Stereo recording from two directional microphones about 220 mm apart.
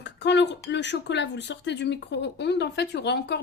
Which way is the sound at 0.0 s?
50° left (ahead or behind).